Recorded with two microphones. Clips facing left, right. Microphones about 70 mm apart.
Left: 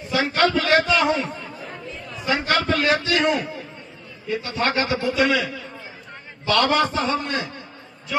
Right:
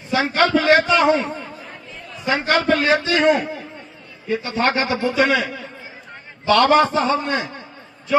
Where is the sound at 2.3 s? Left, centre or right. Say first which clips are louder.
Right 3 dB; right.